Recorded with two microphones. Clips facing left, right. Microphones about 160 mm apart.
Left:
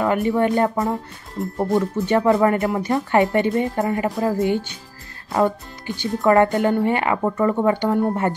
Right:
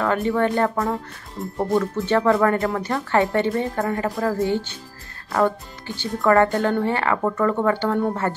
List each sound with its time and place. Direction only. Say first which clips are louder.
0.0 s speech: left 2 dB; 15° left (ahead or behind)
1.4 s speech: left 1 dB; centre (ahead or behind)
2.0 s speech: left 2 dB; 15° left (ahead or behind)